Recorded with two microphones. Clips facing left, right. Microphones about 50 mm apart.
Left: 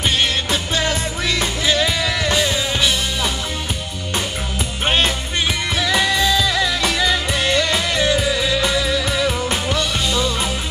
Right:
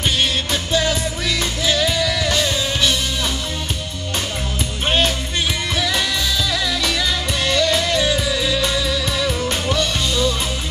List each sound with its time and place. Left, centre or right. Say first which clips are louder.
0.0 s music: left 1 dB; left
4.8 s music: even; left
9.1 s music: left 1 dB; centre